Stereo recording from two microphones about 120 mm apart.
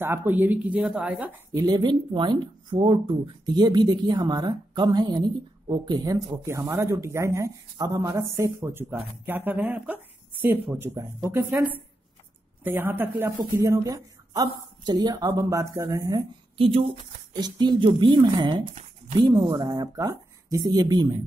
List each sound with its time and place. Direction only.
0.0 s speech: 20° right (ahead or behind)
1.5 s a woman's voice: 35° right (ahead or behind)
12.6 s a woman's voice: 15° right (ahead or behind)
16.5 s speech: 50° right (ahead or behind)
17.3 s speech: 35° right (ahead or behind)